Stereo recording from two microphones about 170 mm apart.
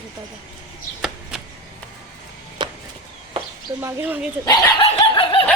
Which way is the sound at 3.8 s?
15° right (ahead or behind).